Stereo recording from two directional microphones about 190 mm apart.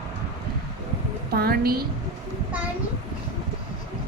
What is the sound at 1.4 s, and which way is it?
Speech, 55° right (ahead or behind).